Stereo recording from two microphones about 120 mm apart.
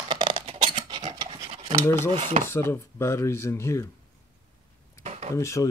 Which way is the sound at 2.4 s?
20° left (ahead or behind).